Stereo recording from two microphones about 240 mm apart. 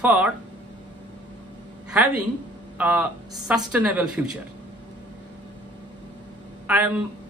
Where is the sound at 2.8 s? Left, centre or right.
Centre.